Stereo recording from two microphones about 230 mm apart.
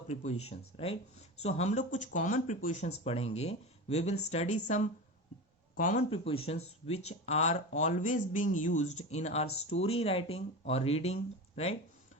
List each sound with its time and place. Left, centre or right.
0.1 s speech: left